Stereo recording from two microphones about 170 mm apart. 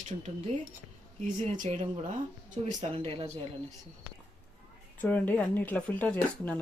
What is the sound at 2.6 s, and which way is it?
Speech, 35° right (ahead or behind).